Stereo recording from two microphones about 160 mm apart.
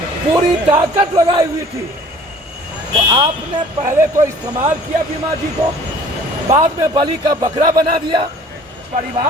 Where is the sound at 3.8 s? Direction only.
20° right (ahead or behind).